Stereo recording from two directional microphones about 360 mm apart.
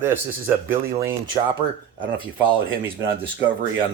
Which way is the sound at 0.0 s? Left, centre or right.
Centre.